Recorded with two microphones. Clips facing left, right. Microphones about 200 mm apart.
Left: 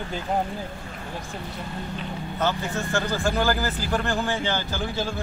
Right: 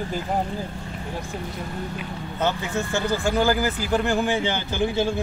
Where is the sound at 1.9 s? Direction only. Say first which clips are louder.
Even; 15° right (ahead or behind).